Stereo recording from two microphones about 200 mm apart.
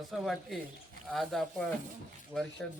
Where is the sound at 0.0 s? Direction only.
Centre (ahead or behind).